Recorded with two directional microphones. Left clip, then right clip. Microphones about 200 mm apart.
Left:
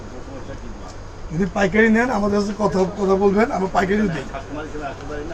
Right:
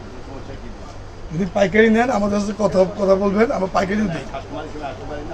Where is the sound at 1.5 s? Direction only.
25° right (ahead or behind).